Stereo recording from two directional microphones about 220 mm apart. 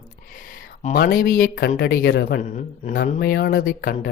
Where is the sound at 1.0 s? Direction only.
40° left (ahead or behind).